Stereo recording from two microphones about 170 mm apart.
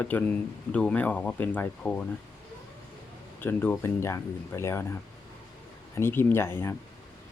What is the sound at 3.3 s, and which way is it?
Speech, 10° left (ahead or behind).